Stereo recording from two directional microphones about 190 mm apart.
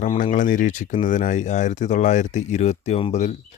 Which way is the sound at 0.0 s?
35° left (ahead or behind).